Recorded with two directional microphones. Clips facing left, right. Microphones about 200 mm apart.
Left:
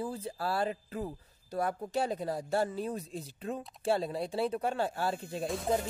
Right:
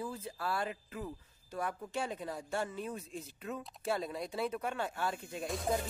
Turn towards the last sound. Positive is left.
turn(degrees=0)  # may be behind; listen again after turning